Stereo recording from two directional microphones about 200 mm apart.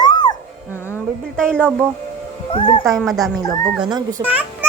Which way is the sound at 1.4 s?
5° left (ahead or behind).